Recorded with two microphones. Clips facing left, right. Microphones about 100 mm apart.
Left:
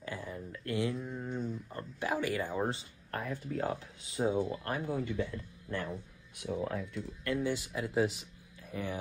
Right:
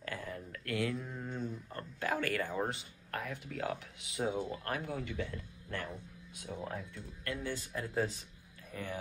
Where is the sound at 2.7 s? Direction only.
35° left (ahead or behind).